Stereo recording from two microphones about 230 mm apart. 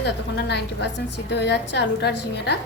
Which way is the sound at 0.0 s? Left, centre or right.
Left.